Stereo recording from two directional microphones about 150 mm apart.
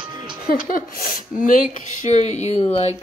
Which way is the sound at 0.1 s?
30° right (ahead or behind).